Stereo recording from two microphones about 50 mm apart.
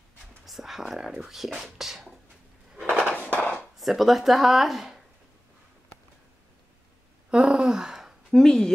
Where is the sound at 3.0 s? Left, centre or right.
Centre.